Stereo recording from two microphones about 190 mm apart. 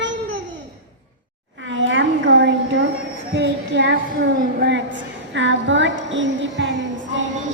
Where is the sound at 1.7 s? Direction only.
80° right.